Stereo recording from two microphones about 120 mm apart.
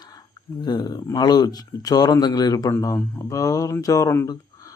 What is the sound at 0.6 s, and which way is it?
Speech, 35° left (ahead or behind).